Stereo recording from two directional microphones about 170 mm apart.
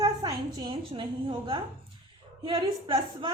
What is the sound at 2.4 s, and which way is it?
Speech, 25° right (ahead or behind).